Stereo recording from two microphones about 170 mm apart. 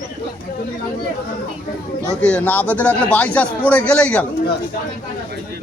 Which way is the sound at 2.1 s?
5° left (ahead or behind).